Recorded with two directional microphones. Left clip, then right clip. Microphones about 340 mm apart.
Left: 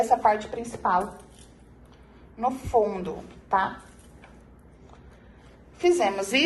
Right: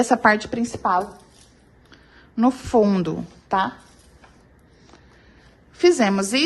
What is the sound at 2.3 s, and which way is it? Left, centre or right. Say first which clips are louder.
A woman's voice: right 5 dB; right.